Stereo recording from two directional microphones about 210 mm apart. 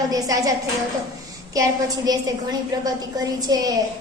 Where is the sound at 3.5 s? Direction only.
20° right (ahead or behind).